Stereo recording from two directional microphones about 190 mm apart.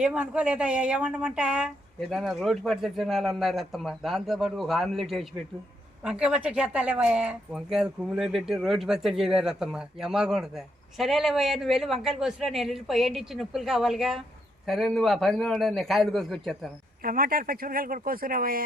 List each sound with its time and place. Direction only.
0.0 s a woman's voice: 5° right (ahead or behind)
17.0 s speech: 50° right (ahead or behind)